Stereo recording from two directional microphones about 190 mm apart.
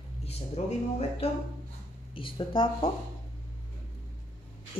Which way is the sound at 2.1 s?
25° left (ahead or behind).